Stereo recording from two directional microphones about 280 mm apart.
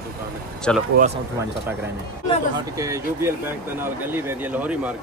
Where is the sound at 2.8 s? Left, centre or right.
Centre.